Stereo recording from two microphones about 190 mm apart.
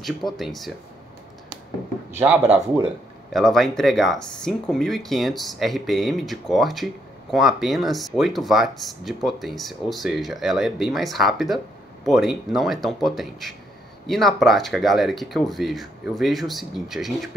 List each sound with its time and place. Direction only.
0.0 s speech: centre (ahead or behind)
2.1 s speech: 10° right (ahead or behind)